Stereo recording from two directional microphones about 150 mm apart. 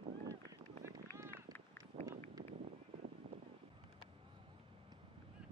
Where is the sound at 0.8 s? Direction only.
15° right (ahead or behind).